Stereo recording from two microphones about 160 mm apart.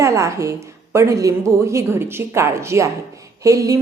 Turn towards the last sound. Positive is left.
turn(degrees=-20)  # may be behind; listen again after turning